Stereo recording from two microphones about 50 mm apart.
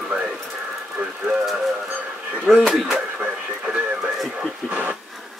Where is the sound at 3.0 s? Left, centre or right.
Right.